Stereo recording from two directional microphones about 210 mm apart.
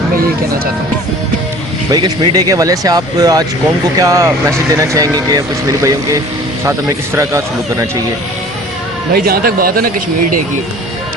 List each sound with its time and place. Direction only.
1.9 s speech: 20° right (ahead or behind)
7.2 s speech: 15° right (ahead or behind)
9.2 s a man's voice: 45° right (ahead or behind)